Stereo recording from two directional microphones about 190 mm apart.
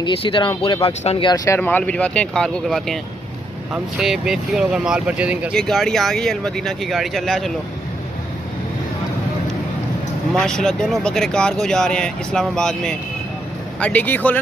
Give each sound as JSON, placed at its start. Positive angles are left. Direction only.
{"t": 0.0, "sound": "speech", "side_deg": 25}
{"t": 10.3, "sound": "speech", "side_deg": 5}